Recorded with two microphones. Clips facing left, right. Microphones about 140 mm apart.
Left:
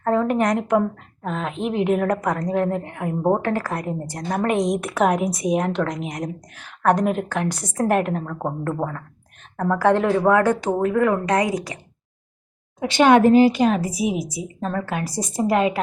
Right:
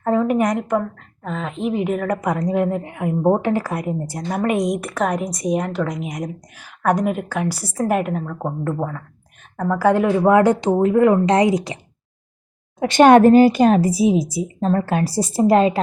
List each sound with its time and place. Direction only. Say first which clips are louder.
0.0 s a woman's voice: right 2 dB; 10° right (ahead or behind)
12.8 s speech: right 4 dB; 50° right (ahead or behind); by 15.8 s 30° right (ahead or behind)